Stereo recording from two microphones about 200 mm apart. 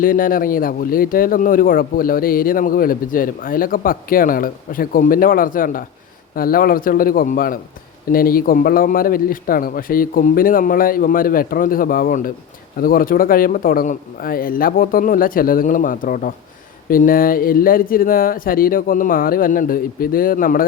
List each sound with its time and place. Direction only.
0.0 s speech: 45° left (ahead or behind)